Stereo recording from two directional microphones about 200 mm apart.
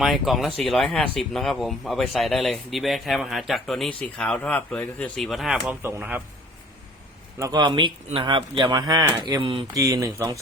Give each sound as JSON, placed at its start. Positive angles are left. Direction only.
{"t": 0.0, "sound": "speech", "side_deg": 0}
{"t": 7.3, "sound": "speech", "side_deg": -20}